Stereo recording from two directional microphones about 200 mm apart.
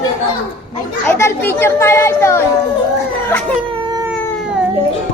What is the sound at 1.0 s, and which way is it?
A child's voice, 10° left (ahead or behind).